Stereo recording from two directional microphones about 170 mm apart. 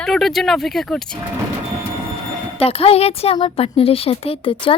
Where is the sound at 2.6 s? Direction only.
35° left (ahead or behind).